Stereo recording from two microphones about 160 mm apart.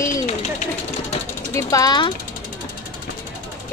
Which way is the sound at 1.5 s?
20° left (ahead or behind).